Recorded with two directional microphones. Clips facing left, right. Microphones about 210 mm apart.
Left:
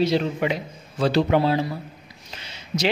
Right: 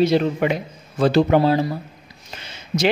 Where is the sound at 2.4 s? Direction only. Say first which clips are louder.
Right 4 dB; 50° right (ahead or behind).